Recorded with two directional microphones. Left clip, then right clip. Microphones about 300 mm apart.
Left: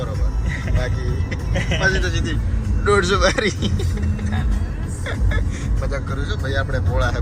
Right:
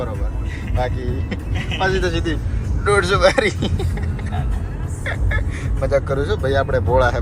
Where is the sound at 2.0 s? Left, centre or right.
Centre.